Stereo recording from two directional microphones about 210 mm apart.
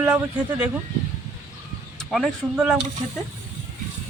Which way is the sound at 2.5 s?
5° right (ahead or behind).